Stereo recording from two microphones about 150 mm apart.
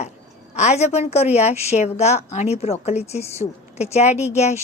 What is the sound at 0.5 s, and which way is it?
A woman's voice, 45° left (ahead or behind).